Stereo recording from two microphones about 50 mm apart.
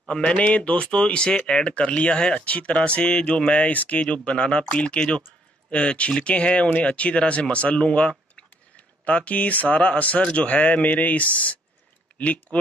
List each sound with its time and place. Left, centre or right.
0.1 s speech: left